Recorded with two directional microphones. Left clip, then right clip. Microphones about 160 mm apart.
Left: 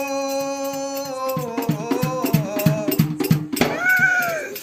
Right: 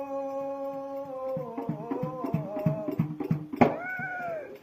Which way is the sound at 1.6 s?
35° left (ahead or behind).